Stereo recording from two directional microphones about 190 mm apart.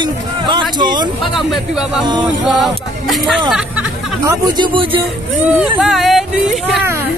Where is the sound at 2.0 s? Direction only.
25° right (ahead or behind).